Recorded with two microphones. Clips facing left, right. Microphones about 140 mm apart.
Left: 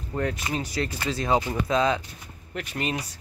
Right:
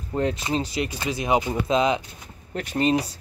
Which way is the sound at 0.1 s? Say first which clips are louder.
Right 4 dB; 25° right (ahead or behind).